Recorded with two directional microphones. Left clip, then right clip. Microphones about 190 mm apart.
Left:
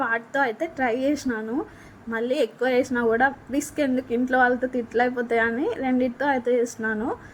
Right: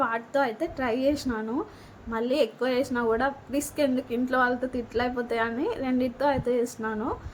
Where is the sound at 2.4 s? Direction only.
20° left (ahead or behind).